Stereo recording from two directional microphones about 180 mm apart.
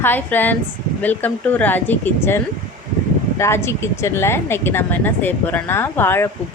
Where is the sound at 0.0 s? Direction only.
10° left (ahead or behind).